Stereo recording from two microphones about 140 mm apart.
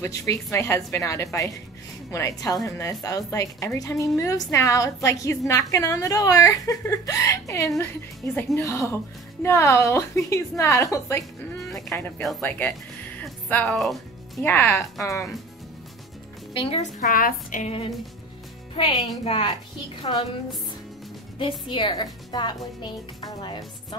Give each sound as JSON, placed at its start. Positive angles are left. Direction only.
{"t": 0.0, "sound": "speech", "side_deg": 20}
{"t": 12.2, "sound": "speech", "side_deg": 0}
{"t": 12.4, "sound": "speech", "side_deg": 10}
{"t": 13.2, "sound": "music", "side_deg": 10}
{"t": 14.4, "sound": "speech", "side_deg": 15}
{"t": 16.5, "sound": "speech", "side_deg": 40}
{"t": 17.0, "sound": "a woman's voice", "side_deg": 75}
{"t": 19.2, "sound": "speech", "side_deg": 40}
{"t": 21.4, "sound": "speech", "side_deg": 35}